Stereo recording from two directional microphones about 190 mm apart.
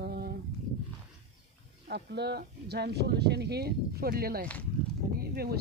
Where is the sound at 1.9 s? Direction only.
60° right (ahead or behind).